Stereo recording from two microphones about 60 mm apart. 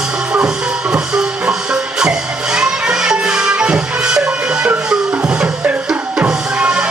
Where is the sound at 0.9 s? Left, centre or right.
Centre.